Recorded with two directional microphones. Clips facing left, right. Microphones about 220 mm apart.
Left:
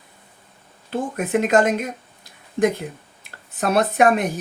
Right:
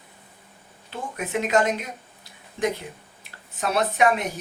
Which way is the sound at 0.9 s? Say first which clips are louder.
Left 8 dB; 50° left (ahead or behind).